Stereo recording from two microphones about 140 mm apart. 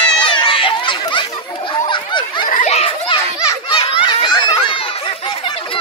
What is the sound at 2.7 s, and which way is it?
Children playing, 45° left (ahead or behind).